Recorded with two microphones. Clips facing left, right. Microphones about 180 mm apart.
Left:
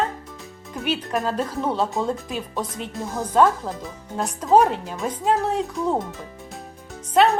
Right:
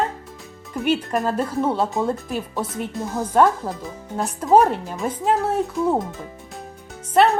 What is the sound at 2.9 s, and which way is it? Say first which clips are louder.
A woman's voice: right 1 dB; centre (ahead or behind).